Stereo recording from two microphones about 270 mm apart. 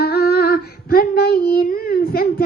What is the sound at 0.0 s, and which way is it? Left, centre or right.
Female singing, left.